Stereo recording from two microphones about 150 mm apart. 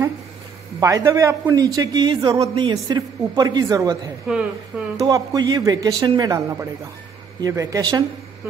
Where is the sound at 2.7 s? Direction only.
25° right (ahead or behind).